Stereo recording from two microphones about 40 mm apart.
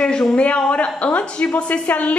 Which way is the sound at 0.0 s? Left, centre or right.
Left.